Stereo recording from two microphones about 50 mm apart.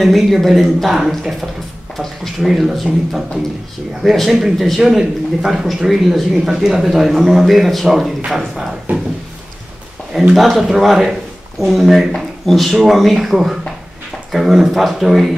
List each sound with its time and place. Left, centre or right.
0.0 s a man's voice: centre
2.4 s a man's voice: centre
8.9 s speech: right
10.3 s a man's voice: centre